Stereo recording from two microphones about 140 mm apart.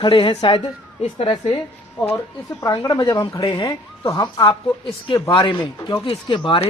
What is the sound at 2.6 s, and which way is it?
Speech, 25° left (ahead or behind).